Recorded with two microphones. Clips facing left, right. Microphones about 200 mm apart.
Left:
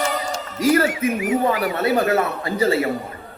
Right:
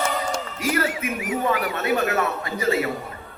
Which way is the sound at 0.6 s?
35° left (ahead or behind).